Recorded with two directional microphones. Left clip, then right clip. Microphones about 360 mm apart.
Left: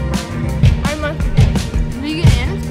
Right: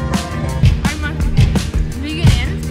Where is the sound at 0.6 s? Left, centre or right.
Centre.